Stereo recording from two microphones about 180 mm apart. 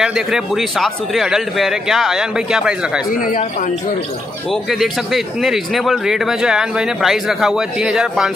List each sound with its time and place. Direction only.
0.0 s speech: 5° right (ahead or behind)
3.1 s speech: 50° left (ahead or behind)
4.5 s speech: centre (ahead or behind)